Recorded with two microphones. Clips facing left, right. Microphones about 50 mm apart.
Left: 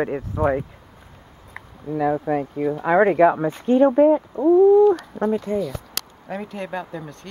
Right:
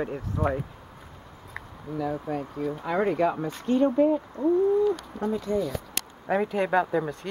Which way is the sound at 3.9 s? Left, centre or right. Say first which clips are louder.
Left 7 dB; left.